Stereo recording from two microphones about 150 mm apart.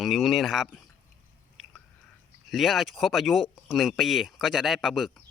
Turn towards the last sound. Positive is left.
turn(degrees=0)  # may be behind; listen again after turning